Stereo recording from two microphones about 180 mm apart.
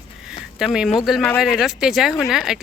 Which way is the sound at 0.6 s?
5° right (ahead or behind).